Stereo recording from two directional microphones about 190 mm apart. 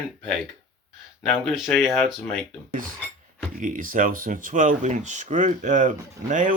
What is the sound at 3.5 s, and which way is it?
Speech, 45° right (ahead or behind).